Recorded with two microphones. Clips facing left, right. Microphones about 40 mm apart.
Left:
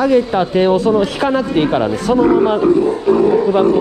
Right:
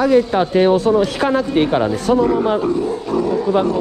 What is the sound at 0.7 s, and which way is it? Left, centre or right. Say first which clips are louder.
Speech: left 1 dB; left.